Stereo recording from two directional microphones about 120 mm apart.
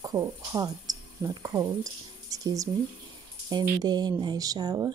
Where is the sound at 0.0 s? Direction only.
30° right (ahead or behind).